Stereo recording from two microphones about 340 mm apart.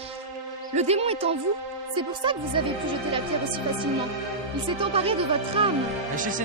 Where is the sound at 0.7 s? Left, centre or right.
Centre.